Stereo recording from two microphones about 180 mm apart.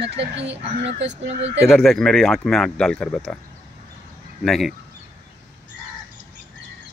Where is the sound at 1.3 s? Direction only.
80° right.